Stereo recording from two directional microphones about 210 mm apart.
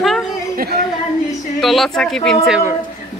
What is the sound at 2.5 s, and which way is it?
Speech, 5° right (ahead or behind).